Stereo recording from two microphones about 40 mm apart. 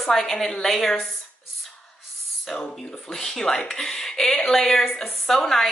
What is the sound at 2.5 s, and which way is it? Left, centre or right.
A woman's voice, centre.